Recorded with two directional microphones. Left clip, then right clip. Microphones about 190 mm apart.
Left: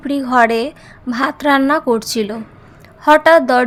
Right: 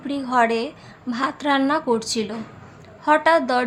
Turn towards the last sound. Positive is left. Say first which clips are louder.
# left 8 dB
turn(degrees=35)  # may be behind; listen again after turning